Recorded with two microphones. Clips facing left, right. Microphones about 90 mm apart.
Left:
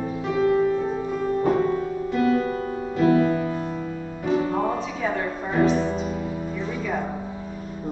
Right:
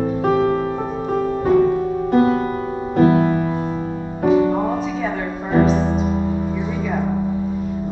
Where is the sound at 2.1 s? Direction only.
45° right (ahead or behind).